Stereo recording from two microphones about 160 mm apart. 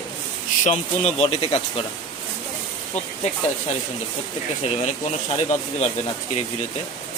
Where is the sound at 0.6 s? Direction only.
45° left (ahead or behind).